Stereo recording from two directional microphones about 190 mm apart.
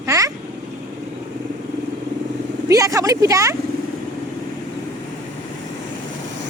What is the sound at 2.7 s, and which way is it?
Speech, 15° right (ahead or behind).